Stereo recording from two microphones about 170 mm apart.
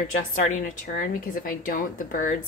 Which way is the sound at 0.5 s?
55° left (ahead or behind).